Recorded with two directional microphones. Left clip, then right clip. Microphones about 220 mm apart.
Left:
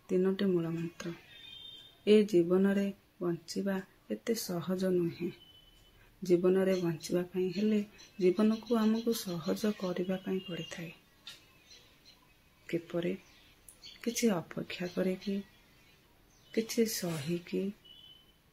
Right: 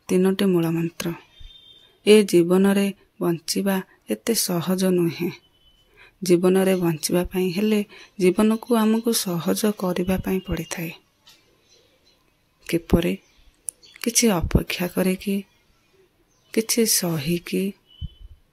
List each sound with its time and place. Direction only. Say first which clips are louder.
0.0 s speech: right 10 dB; 45° right (ahead or behind)
12.6 s speech: right 13 dB; 50° right (ahead or behind)
16.5 s speech: right 11 dB; 45° right (ahead or behind)